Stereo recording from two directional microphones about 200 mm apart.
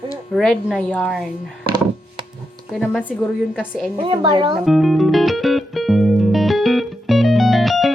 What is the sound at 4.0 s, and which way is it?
Speech, 25° right (ahead or behind).